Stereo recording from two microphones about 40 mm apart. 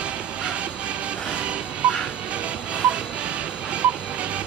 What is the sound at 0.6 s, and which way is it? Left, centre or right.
Music, right.